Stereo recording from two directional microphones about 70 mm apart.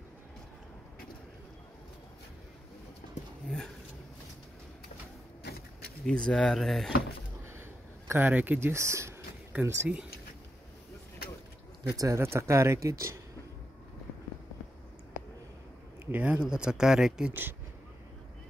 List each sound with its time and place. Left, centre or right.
3.4 s speech: centre
6.0 s speech: centre
8.1 s speech: right
8.5 s speech: right
9.5 s speech: centre
11.9 s speech: right
12.2 s speech: right
16.1 s speech: centre
17.3 s speech: right